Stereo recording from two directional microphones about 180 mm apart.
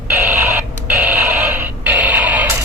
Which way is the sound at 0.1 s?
15° right (ahead or behind).